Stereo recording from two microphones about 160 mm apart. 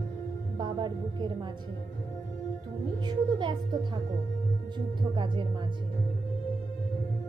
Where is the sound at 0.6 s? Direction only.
30° right (ahead or behind).